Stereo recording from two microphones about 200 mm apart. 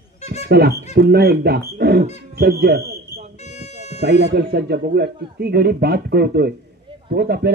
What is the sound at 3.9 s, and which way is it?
Speech, 55° right (ahead or behind).